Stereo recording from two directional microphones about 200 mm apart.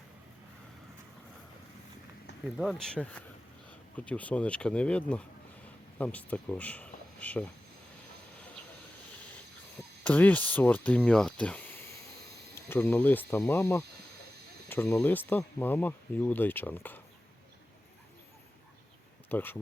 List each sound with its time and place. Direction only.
2.6 s speech: centre (ahead or behind)
10.0 s speech: 5° left (ahead or behind)
19.3 s speech: 10° left (ahead or behind)